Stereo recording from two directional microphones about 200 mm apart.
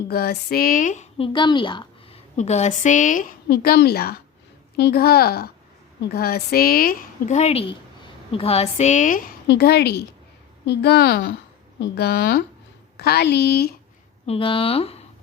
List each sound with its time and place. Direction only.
0.1 s speech: 50° left (ahead or behind)
1.3 s a woman's voice: 25° left (ahead or behind)
2.3 s a woman's voice: 35° left (ahead or behind); by 13.7 s 50° left (ahead or behind)
14.3 s speech: 25° left (ahead or behind)